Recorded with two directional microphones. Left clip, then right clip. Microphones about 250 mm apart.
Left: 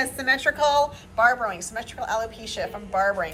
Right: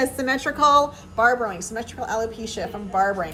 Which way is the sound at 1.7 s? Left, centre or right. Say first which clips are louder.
Right 1 dB; centre.